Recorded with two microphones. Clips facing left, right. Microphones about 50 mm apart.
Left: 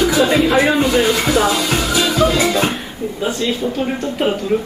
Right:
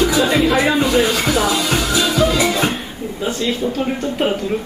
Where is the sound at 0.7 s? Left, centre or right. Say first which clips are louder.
Left 1 dB; left.